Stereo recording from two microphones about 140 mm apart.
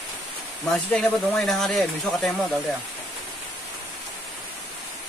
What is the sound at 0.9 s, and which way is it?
Speech, 5° left (ahead or behind).